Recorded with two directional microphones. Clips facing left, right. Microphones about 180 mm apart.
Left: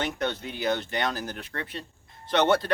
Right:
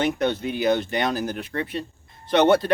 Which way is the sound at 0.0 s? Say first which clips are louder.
Right 7 dB; 15° right (ahead or behind).